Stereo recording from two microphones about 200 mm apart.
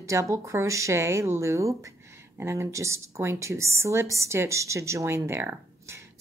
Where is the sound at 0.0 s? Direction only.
15° right (ahead or behind).